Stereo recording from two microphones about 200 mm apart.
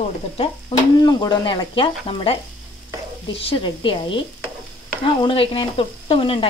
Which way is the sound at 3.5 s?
25° left (ahead or behind).